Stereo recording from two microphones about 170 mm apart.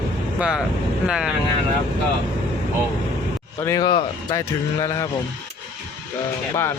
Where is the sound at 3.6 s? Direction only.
20° left (ahead or behind).